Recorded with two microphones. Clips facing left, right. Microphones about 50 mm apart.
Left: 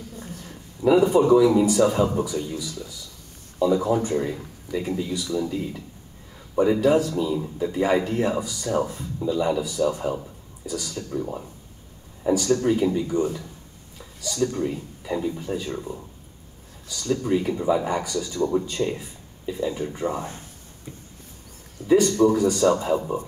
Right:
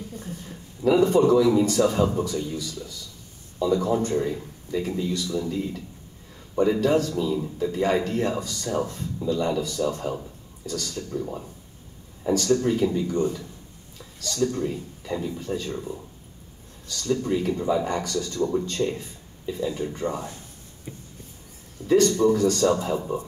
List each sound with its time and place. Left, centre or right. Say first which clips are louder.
0.8 s speech: left 1 dB; centre
20.2 s speech: left 3 dB; left
21.8 s speech: left 1 dB; centre